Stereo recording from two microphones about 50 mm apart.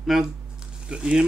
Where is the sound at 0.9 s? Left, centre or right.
Right.